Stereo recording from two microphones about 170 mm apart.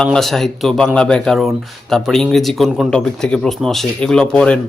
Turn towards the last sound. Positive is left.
turn(degrees=5)  # may be behind; listen again after turning